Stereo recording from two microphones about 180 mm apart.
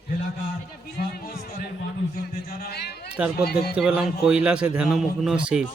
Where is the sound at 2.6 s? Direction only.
60° left (ahead or behind).